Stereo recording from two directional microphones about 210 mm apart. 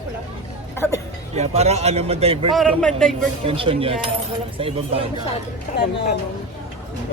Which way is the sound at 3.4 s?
25° right (ahead or behind).